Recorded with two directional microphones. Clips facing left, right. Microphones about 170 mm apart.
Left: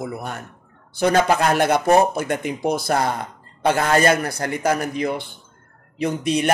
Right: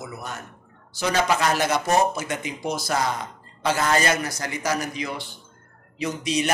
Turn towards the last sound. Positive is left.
turn(degrees=55)  # may be behind; listen again after turning